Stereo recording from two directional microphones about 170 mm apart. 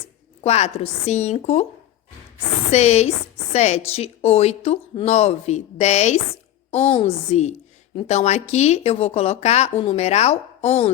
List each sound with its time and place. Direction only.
0.4 s speech: 40° left (ahead or behind)
2.6 s speech: 40° left (ahead or behind)